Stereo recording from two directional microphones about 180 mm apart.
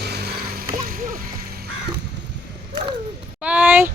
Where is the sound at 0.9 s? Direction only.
50° right (ahead or behind).